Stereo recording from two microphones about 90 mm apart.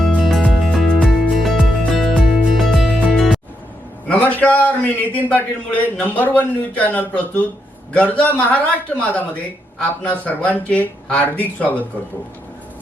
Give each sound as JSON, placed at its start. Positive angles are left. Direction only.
{"t": 0.0, "sound": "music", "side_deg": 5}
{"t": 4.1, "sound": "a man's voice", "side_deg": 15}